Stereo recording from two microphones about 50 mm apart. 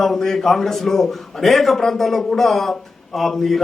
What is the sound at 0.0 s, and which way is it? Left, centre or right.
A man's voice, centre.